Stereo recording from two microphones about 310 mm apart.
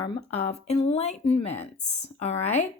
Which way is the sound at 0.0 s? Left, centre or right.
Centre.